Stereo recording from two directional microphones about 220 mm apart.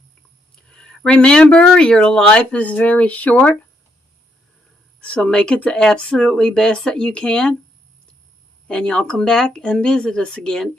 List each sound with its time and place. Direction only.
0.7 s speech: 5° left (ahead or behind)
4.9 s speech: 5° left (ahead or behind)
8.6 s speech: 5° left (ahead or behind)